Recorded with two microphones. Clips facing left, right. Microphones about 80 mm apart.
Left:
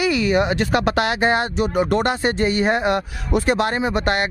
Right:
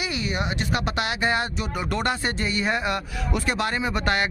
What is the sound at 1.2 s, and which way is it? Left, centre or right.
Speech, left.